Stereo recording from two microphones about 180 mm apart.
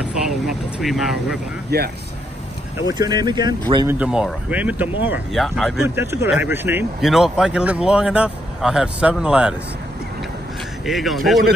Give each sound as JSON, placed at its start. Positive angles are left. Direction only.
{"t": 0.0, "sound": "speech", "side_deg": -5}
{"t": 1.7, "sound": "speech", "side_deg": -65}
{"t": 2.9, "sound": "speech", "side_deg": -25}
{"t": 4.0, "sound": "speech", "side_deg": -5}
{"t": 5.4, "sound": "speech", "side_deg": 0}
{"t": 5.9, "sound": "speech", "side_deg": -15}
{"t": 7.1, "sound": "speech", "side_deg": 0}
{"t": 10.9, "sound": "speech", "side_deg": 0}